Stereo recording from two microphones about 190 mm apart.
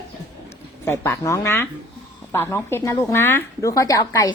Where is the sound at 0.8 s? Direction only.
15° left (ahead or behind).